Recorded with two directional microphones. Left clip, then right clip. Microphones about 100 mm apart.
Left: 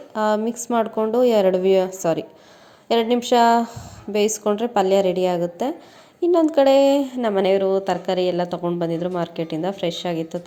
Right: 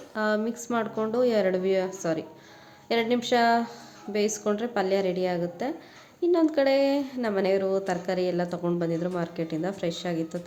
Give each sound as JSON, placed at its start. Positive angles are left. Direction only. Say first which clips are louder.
{"t": 0.1, "sound": "speech", "louder": "left 6 dB", "side_deg": 45}
{"t": 2.9, "sound": "a woman's voice", "louder": "left 7 dB", "side_deg": 50}
{"t": 7.3, "sound": "a woman's voice", "louder": "left 6 dB", "side_deg": 40}
{"t": 7.6, "sound": "speech", "louder": "left 7 dB", "side_deg": 25}